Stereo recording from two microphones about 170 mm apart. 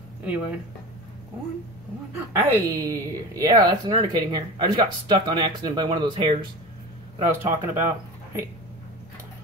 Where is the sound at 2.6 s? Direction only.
20° right (ahead or behind).